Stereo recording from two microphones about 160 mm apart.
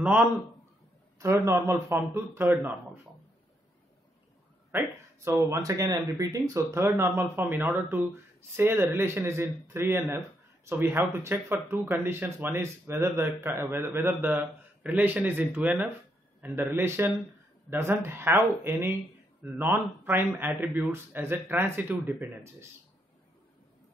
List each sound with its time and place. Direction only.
0.0 s speech: 10° right (ahead or behind)
4.7 s speech: 15° right (ahead or behind)